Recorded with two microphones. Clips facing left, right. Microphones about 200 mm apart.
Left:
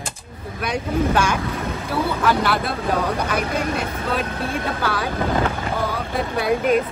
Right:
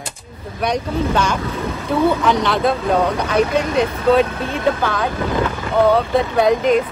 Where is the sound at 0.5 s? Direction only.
5° left (ahead or behind).